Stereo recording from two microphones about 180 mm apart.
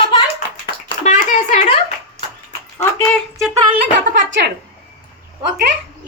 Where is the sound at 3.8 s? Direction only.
75° right (ahead or behind).